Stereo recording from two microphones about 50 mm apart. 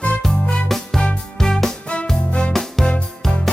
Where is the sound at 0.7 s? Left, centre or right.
Centre.